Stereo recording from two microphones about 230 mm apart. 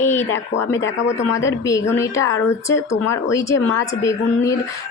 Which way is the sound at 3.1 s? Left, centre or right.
Centre.